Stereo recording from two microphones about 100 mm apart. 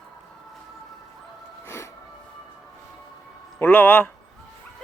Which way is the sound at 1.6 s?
25° left (ahead or behind).